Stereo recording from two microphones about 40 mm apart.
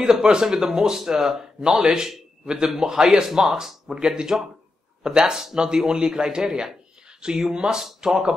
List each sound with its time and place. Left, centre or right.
0.0 s speech: centre